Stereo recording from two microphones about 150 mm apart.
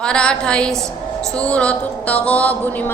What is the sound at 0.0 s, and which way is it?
Music, 5° left (ahead or behind).